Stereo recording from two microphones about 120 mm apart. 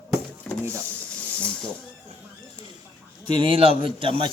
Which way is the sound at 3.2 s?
45° right (ahead or behind).